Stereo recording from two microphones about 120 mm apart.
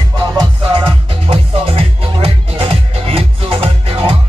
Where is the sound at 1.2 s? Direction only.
55° right (ahead or behind).